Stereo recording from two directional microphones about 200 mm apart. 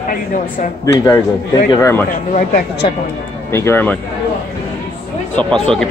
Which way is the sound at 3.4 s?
10° left (ahead or behind).